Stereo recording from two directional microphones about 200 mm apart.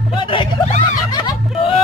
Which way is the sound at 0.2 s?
25° left (ahead or behind).